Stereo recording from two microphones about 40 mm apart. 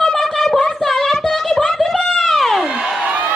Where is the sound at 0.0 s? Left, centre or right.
Centre.